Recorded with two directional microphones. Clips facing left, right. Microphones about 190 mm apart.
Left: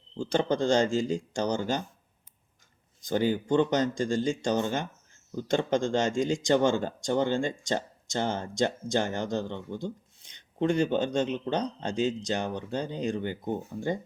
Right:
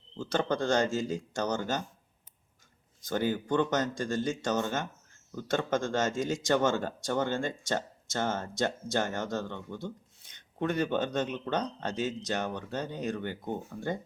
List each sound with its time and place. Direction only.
0.2 s speech: 15° left (ahead or behind)
3.1 s speech: 15° left (ahead or behind)
11.3 s speech: 15° left (ahead or behind)